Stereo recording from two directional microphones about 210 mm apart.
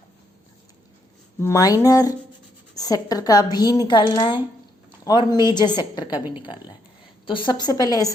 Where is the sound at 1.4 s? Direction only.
15° left (ahead or behind).